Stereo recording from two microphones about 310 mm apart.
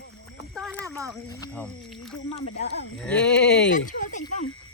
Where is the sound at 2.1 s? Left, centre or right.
Left.